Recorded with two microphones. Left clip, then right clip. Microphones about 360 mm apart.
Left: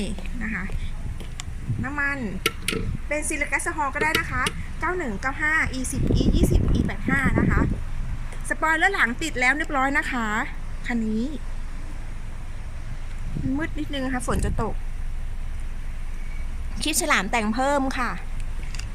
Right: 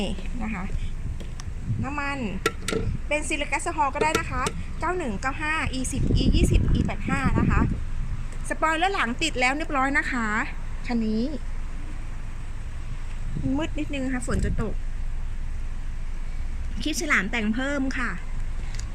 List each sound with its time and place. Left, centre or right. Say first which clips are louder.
0.0 s a woman's voice: even; centre
1.8 s speech: left 3 dB; centre
13.6 s speech: left 1 dB; centre
16.7 s a woman's voice: left 2 dB; centre